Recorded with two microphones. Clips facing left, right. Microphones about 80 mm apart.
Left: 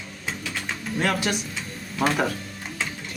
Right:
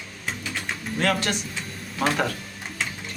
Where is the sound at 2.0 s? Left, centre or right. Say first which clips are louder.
Left 1 dB; centre.